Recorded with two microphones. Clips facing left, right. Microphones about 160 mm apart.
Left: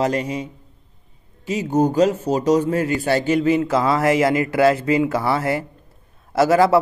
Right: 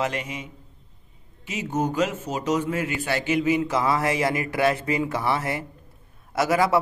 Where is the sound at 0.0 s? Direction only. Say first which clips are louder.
Left 7 dB; 35° left (ahead or behind).